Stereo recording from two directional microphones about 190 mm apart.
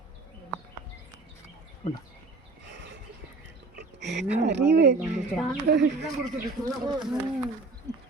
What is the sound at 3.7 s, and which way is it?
Speech, 65° right (ahead or behind).